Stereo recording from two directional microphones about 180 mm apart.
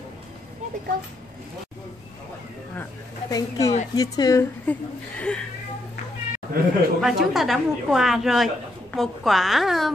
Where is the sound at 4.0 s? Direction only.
20° left (ahead or behind).